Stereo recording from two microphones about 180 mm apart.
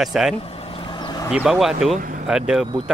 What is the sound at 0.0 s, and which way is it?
Speech, 5° right (ahead or behind).